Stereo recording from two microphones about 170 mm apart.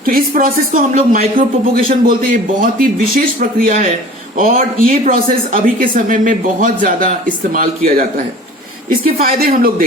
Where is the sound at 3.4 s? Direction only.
50° right (ahead or behind).